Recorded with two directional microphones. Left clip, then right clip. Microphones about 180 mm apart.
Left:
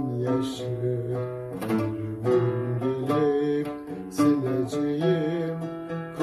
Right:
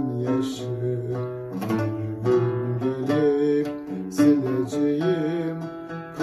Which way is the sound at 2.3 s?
20° right (ahead or behind).